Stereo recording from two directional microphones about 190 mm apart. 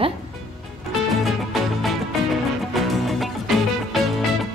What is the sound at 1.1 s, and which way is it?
Music, centre (ahead or behind).